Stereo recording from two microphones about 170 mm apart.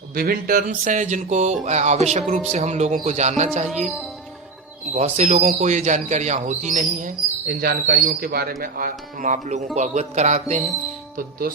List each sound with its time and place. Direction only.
0.1 s speech: 60° right (ahead or behind); by 3.7 s 40° right (ahead or behind)
3.7 s speech: centre (ahead or behind)
4.9 s speech: 40° right (ahead or behind)